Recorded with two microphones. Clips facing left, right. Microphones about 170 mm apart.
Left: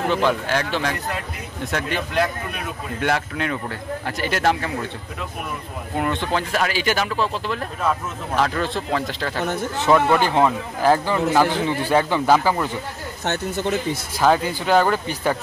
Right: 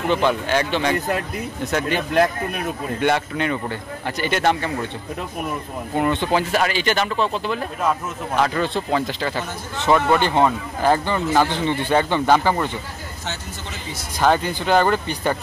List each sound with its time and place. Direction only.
0.1 s speech: centre (ahead or behind)
5.9 s speech: centre (ahead or behind)
13.2 s speech: 55° left (ahead or behind)
14.2 s speech: centre (ahead or behind)